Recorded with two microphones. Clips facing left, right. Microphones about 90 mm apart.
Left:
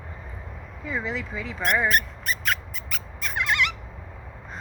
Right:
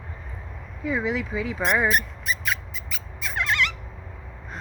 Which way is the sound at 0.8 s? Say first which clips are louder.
Right 4 dB; 5° right (ahead or behind).